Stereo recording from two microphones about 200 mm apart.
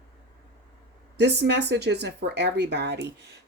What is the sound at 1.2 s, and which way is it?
Speech, 55° right (ahead or behind).